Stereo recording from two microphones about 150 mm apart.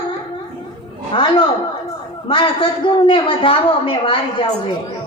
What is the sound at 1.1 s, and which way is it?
A woman's voice, 35° left (ahead or behind).